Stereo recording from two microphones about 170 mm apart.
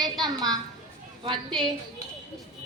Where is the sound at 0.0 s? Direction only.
25° right (ahead or behind).